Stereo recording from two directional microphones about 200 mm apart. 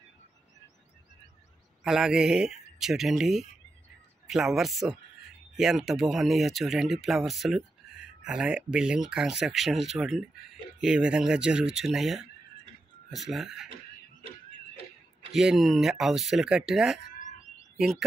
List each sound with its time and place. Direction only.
1.9 s speech: 5° right (ahead or behind)
15.3 s speech: centre (ahead or behind)
17.2 s bird: 40° left (ahead or behind)
17.7 s speech: centre (ahead or behind)